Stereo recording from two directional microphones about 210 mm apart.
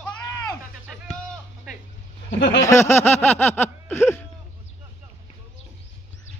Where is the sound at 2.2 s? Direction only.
55° left (ahead or behind).